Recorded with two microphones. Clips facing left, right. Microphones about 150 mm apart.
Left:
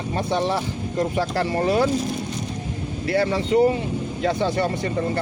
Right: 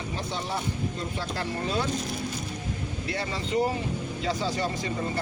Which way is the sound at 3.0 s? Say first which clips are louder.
Left 12 dB; 70° left (ahead or behind).